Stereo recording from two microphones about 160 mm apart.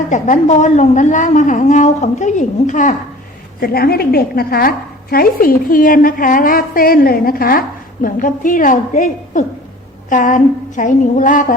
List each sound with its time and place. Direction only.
0.1 s a woman's voice: 50° left (ahead or behind)
3.6 s a woman's voice: 70° left (ahead or behind); by 11.5 s 55° left (ahead or behind)